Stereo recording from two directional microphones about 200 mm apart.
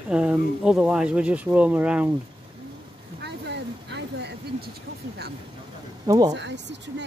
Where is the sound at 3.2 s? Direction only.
60° right (ahead or behind).